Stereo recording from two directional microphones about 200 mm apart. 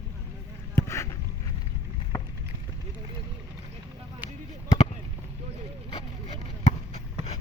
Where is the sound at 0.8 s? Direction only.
15° left (ahead or behind).